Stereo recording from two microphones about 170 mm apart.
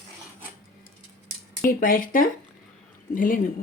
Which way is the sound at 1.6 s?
55° left (ahead or behind).